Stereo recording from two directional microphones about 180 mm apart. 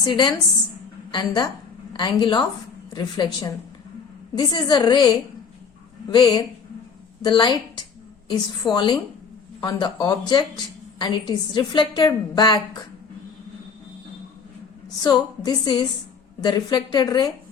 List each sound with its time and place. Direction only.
0.0 s a woman's voice: 25° left (ahead or behind)
8.7 s a woman's voice: 25° left (ahead or behind)
15.0 s a woman's voice: 25° left (ahead or behind)